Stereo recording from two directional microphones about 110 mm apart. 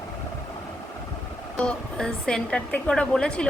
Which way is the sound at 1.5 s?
10° left (ahead or behind).